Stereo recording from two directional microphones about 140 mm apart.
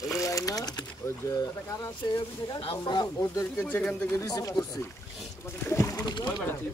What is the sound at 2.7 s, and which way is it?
Speech, 30° left (ahead or behind).